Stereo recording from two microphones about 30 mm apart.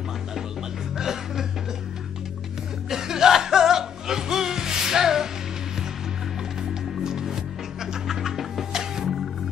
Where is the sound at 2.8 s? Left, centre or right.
Centre.